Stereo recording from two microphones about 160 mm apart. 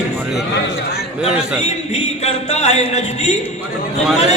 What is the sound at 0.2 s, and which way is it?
Speech, 5° right (ahead or behind).